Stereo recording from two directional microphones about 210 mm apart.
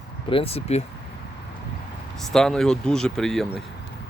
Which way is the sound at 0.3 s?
25° left (ahead or behind).